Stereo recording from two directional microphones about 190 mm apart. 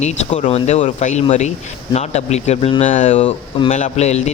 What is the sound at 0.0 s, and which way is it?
Speech, 35° left (ahead or behind).